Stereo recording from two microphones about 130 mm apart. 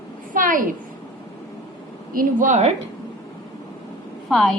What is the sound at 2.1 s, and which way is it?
Speech, 85° right.